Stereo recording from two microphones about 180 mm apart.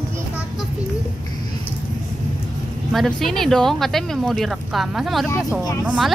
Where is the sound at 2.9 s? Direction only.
Centre (ahead or behind).